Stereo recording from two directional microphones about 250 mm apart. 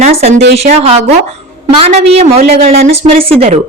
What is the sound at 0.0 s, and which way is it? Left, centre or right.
A woman's voice, right.